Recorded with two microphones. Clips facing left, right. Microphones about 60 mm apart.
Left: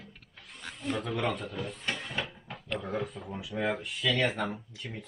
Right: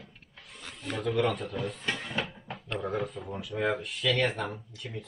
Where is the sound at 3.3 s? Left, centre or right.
Centre.